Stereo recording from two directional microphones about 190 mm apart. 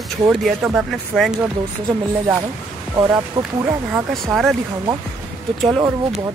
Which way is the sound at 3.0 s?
20° right (ahead or behind).